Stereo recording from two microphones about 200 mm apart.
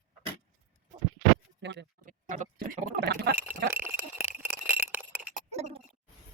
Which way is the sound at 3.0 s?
55° right (ahead or behind).